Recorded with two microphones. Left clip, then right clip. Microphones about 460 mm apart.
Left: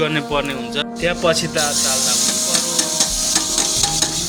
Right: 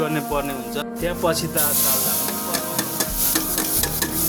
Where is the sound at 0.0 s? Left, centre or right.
Right.